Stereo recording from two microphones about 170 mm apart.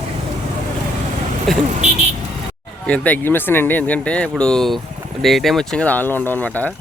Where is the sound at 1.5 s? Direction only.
Centre (ahead or behind).